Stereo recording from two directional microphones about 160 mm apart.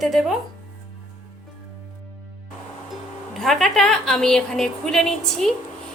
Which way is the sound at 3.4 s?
Centre (ahead or behind).